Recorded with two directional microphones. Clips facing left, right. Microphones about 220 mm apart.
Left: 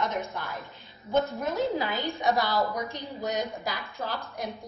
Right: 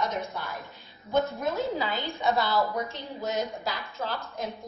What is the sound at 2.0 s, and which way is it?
A woman's voice, 15° left (ahead or behind).